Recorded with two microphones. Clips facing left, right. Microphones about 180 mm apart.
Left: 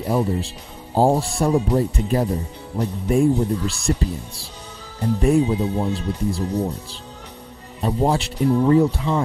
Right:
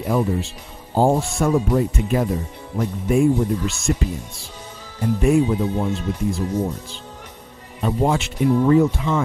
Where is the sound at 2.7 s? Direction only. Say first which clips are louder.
Right 1 dB; 35° left (ahead or behind).